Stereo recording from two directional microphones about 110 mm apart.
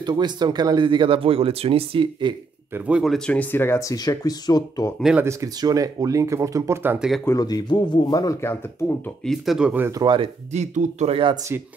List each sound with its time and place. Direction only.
0.0 s speech: 40° right (ahead or behind)
2.9 s speech: centre (ahead or behind)
3.3 s speech: 15° left (ahead or behind)
3.9 s speech: 35° left (ahead or behind)
5.2 s speech: 30° right (ahead or behind)
7.2 s speech: 35° left (ahead or behind)
8.4 s speech: 20° left (ahead or behind)
9.2 s speech: 5° left (ahead or behind)
9.6 s speech: 10° right (ahead or behind)
10.0 s speech: 50° right (ahead or behind)
10.5 s speech: 90° right